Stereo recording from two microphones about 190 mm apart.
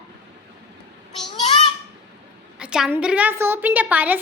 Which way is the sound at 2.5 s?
5° right (ahead or behind).